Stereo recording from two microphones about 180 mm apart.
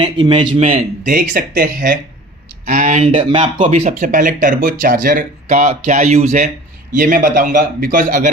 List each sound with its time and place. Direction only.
0.0 s a man's voice: 30° right (ahead or behind)
1.1 s speech: 55° right (ahead or behind)
3.1 s speech: 30° right (ahead or behind)
3.6 s speech: 40° right (ahead or behind)